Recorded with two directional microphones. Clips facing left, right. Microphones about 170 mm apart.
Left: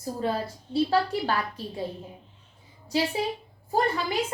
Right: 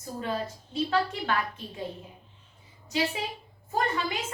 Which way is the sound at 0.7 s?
35° left (ahead or behind).